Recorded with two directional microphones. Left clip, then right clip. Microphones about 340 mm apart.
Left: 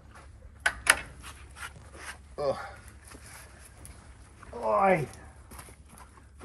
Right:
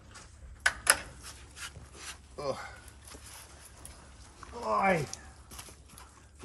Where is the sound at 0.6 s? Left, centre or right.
Centre.